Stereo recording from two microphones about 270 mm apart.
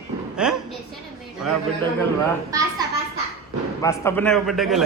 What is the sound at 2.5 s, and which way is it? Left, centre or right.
Speech, centre.